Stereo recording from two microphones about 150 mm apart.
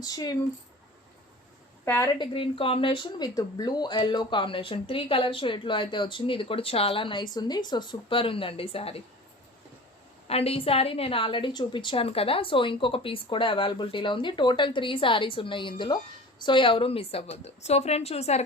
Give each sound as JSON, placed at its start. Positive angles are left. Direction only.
{"t": 0.0, "sound": "speech", "side_deg": 25}
{"t": 1.8, "sound": "a woman's voice", "side_deg": 15}
{"t": 2.1, "sound": "speech", "side_deg": 35}
{"t": 10.2, "sound": "a woman's voice", "side_deg": 40}